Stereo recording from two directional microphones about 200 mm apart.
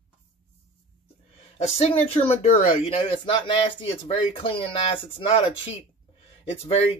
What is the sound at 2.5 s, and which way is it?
Speech, 30° left (ahead or behind).